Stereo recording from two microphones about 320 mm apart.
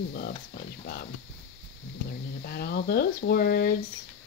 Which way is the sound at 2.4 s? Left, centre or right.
Left.